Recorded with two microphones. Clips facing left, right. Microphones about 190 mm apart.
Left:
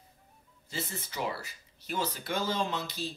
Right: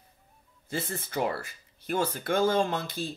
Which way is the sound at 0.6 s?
55° right (ahead or behind).